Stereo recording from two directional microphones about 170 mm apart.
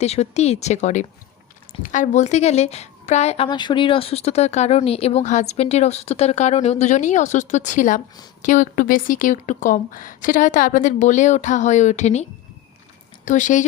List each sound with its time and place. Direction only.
0.0 s a woman's voice: 40° left (ahead or behind)
13.2 s a woman's voice: 45° left (ahead or behind)